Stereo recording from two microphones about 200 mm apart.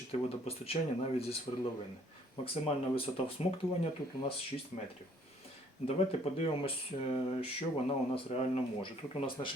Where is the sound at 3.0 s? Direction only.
30° left (ahead or behind).